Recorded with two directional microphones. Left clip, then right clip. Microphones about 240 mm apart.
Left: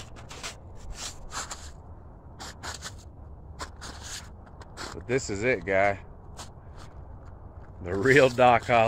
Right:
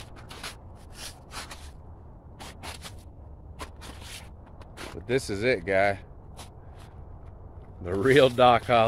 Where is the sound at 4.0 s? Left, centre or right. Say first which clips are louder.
Left 3 dB; centre.